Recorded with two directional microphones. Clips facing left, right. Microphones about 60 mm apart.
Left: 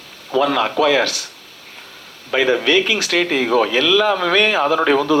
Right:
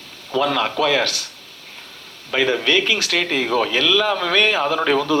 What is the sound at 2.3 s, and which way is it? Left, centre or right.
Speech, left.